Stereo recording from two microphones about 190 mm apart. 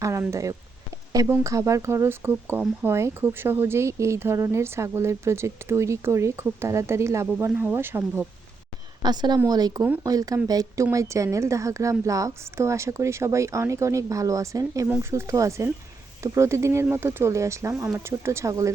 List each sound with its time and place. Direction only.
0.0 s speech: 15° right (ahead or behind)
9.0 s a woman's voice: 20° right (ahead or behind)